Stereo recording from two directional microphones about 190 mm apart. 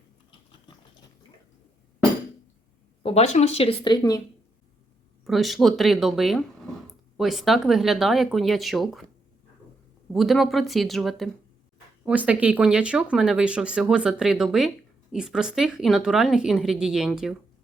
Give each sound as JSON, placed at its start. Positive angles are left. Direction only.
{"t": 3.0, "sound": "speech", "side_deg": 30}
{"t": 5.2, "sound": "speech", "side_deg": 0}
{"t": 10.1, "sound": "speech", "side_deg": 0}